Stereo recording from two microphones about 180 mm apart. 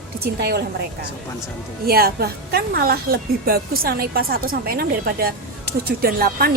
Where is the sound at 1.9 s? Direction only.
60° right (ahead or behind).